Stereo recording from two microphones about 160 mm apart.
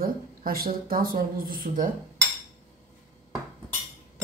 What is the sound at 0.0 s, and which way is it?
Speech, 65° right (ahead or behind).